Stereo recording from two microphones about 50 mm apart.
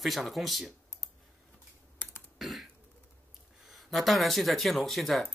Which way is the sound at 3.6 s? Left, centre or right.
Centre.